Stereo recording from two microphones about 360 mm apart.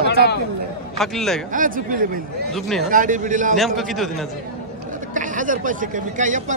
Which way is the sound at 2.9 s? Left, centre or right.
Right.